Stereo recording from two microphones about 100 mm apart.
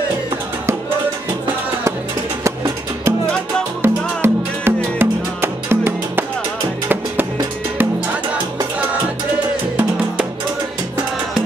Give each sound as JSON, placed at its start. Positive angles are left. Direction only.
{"t": 2.4, "sound": "music", "side_deg": -30}